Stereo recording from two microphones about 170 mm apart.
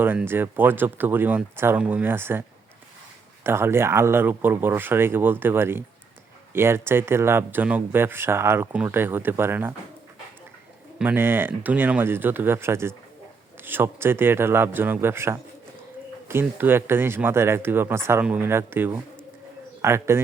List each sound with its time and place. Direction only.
0.0 s speech: 10° right (ahead or behind)
3.4 s speech: 15° right (ahead or behind)
10.9 s speech: 10° right (ahead or behind)